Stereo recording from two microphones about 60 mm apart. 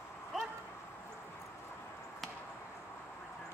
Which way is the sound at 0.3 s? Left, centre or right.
Centre.